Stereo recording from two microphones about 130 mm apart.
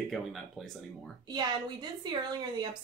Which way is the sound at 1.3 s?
35° right (ahead or behind).